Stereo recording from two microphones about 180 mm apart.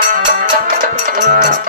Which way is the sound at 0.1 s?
45° right (ahead or behind).